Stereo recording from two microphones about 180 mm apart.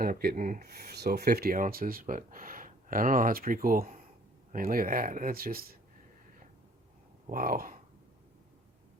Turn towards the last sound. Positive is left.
turn(degrees=-55)  # may be behind; listen again after turning